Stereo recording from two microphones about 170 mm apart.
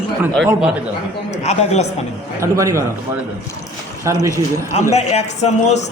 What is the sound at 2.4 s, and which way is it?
Speech, 15° right (ahead or behind).